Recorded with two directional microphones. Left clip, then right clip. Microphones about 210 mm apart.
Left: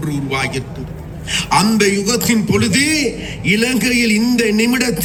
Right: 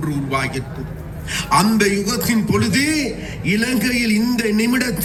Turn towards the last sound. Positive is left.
turn(degrees=50)  # may be behind; listen again after turning